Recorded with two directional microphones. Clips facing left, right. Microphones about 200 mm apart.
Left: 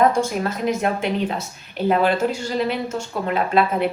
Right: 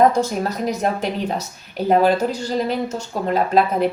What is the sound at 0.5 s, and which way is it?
Speech, 40° right (ahead or behind).